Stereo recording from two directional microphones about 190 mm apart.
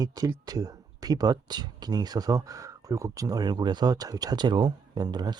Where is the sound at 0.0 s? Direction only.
20° right (ahead or behind).